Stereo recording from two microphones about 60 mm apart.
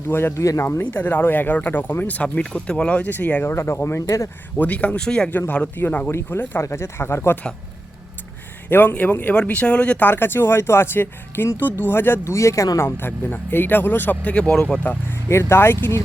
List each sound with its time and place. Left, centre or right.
0.1 s speech: left
0.3 s speech: left
0.8 s speech: left
3.4 s speech: left
4.5 s speech: left
5.7 s speech: left
6.1 s speech: left
8.7 s speech: left
9.3 s speech: centre
10.1 s speech: left
12.2 s speech: left
13.0 s speech: left
14.3 s speech: centre
15.3 s speech: left